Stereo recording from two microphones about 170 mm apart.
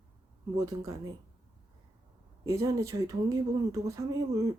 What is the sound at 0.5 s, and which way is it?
Speech, 20° right (ahead or behind).